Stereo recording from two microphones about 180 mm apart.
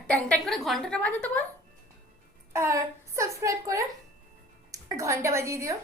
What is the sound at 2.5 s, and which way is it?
A woman's voice, 15° right (ahead or behind).